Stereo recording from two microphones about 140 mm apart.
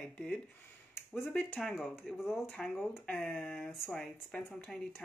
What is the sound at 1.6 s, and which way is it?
Speech, centre (ahead or behind).